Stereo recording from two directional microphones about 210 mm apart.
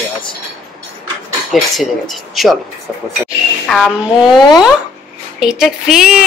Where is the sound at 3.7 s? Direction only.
Centre (ahead or behind).